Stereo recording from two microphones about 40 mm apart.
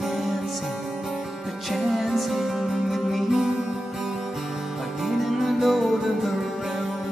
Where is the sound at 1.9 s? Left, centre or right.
Centre.